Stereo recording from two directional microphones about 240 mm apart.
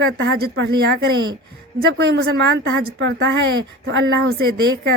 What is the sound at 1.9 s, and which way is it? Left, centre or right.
Speech, right.